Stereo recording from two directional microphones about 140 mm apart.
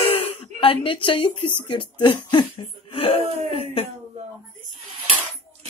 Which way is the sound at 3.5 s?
45° left (ahead or behind).